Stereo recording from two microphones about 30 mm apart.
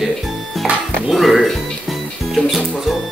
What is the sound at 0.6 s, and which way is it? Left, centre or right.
Music, right.